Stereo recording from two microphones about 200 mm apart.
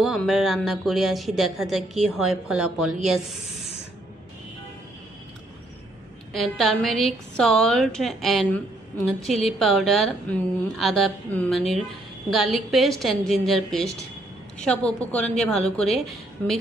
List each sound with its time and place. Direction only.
0.0 s a woman's voice: centre (ahead or behind)
6.3 s a woman's voice: centre (ahead or behind)